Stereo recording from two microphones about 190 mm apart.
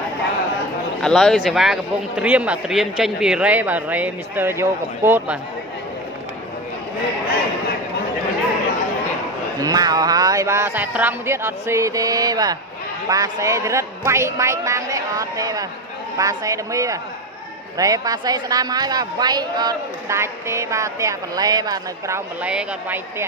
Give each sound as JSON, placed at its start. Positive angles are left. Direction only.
{"t": 1.0, "sound": "a man's voice", "side_deg": 5}
{"t": 9.6, "sound": "a man's voice", "side_deg": -20}